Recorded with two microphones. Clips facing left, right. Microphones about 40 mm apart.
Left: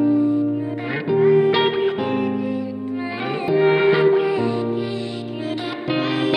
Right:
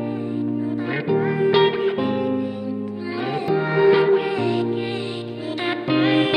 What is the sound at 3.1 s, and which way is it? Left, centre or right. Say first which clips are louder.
Music: even; left.